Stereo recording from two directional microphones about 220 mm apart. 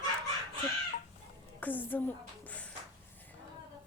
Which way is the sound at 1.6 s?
10° left (ahead or behind).